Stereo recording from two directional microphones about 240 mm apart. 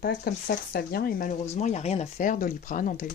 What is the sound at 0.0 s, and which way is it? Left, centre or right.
Speech, left.